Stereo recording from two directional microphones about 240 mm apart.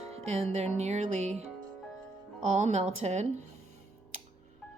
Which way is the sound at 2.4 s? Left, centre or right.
Right.